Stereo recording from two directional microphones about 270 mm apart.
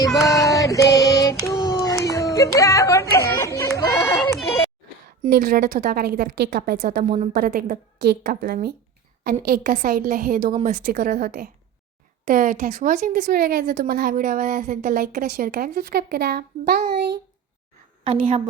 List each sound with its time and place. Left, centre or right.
0.3 s child singing: centre
5.2 s a woman's voice: right
18.0 s a woman's voice: right